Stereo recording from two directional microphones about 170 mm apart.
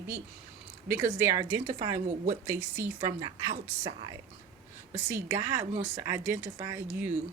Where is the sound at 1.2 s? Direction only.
25° right (ahead or behind).